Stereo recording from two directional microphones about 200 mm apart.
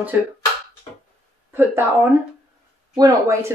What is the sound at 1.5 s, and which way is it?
Speech, 10° right (ahead or behind).